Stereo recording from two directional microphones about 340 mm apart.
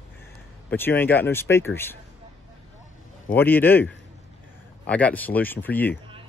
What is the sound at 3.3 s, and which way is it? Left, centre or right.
Speech, centre.